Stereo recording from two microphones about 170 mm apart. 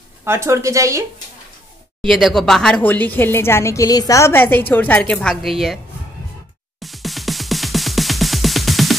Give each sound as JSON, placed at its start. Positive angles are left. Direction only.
{"t": 0.2, "sound": "a woman's voice", "side_deg": -15}
{"t": 2.0, "sound": "a woman's voice", "side_deg": 0}
{"t": 6.8, "sound": "music", "side_deg": 0}